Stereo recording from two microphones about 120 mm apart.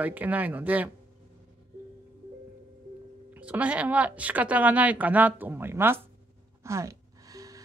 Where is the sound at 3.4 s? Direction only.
10° right (ahead or behind).